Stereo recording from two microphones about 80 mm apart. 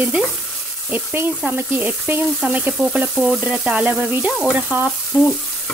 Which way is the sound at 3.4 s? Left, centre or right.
Centre.